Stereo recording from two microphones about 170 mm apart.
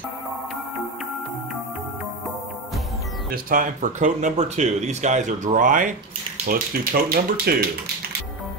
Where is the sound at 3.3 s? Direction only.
55° right (ahead or behind).